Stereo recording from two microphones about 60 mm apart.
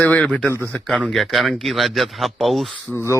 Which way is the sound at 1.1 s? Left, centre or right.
Centre.